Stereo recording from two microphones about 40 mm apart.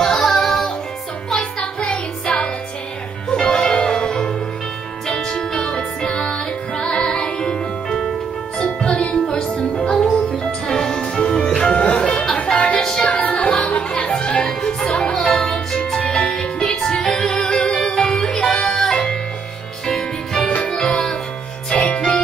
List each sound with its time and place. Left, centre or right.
0.0 s music: centre
1.6 s music: left
8.5 s music: left
8.9 s music: left
12.0 s music: centre
12.4 s music: left